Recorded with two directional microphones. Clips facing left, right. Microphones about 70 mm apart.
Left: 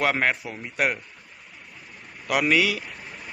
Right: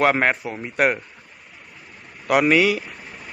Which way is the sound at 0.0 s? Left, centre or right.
Right.